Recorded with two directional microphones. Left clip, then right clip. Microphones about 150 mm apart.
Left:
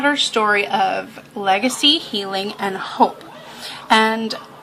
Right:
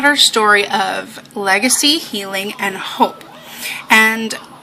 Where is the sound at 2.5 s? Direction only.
10° left (ahead or behind).